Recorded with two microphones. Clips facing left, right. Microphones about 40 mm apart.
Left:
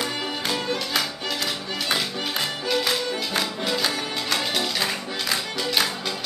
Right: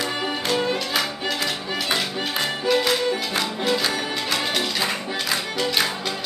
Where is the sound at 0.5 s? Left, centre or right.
Centre.